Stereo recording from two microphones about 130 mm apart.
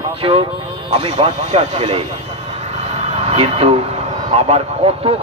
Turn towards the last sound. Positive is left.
turn(degrees=-50)  # may be behind; listen again after turning